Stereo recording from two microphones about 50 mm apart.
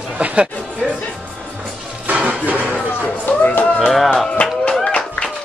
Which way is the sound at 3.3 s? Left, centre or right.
Left.